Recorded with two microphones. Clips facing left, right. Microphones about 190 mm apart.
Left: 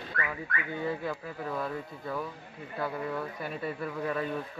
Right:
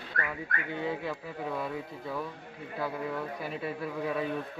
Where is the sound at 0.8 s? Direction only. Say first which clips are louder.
Left 1 dB; centre (ahead or behind).